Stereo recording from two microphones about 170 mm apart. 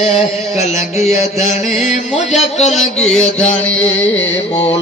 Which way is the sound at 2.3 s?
40° left (ahead or behind).